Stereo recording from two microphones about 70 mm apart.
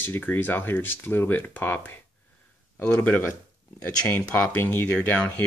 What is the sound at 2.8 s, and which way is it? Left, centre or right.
Speech, left.